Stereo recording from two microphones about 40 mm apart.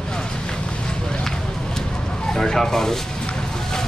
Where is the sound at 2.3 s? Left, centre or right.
Centre.